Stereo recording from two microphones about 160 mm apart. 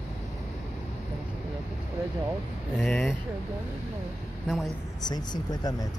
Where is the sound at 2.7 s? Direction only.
Centre (ahead or behind).